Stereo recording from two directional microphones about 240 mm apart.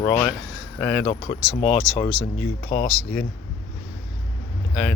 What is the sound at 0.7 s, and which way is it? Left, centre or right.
Speech, centre.